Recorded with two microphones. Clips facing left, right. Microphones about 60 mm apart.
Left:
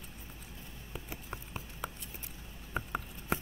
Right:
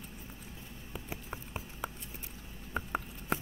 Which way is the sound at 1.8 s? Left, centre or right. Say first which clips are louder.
Right 1 dB; centre.